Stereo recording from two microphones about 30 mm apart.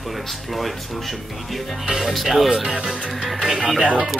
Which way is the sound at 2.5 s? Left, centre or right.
Right.